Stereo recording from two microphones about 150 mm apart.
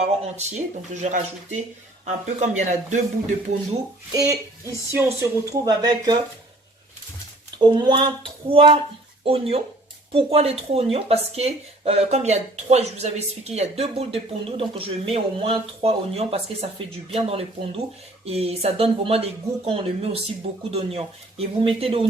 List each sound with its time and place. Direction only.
0.0 s speech: 50° right (ahead or behind)
4.1 s speech: 20° right (ahead or behind)
7.6 s speech: 30° right (ahead or behind)